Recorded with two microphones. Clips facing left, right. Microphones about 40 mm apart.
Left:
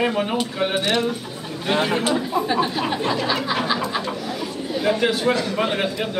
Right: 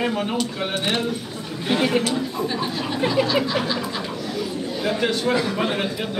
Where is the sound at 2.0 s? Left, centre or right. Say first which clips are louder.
Left 3 dB; centre.